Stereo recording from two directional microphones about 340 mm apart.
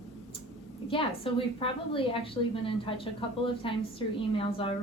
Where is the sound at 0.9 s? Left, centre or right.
Centre.